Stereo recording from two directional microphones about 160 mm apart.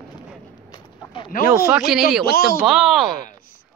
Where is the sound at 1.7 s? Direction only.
5° right (ahead or behind).